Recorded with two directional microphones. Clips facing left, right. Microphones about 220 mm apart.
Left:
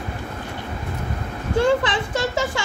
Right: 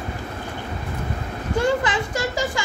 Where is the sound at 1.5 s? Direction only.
25° left (ahead or behind).